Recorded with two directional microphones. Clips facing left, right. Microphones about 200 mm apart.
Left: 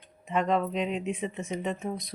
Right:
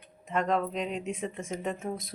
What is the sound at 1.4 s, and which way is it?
Speech, centre (ahead or behind).